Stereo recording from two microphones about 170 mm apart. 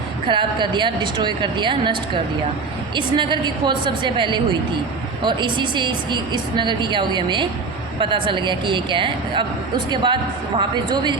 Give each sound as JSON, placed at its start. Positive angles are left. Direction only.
{"t": 0.3, "sound": "a woman's voice", "side_deg": -30}